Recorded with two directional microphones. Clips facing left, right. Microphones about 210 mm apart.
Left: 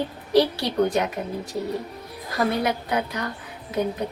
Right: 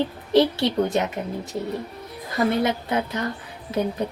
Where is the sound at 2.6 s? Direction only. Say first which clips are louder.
Right 1 dB; 25° right (ahead or behind).